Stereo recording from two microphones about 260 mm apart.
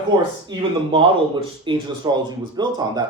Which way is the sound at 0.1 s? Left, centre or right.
Centre.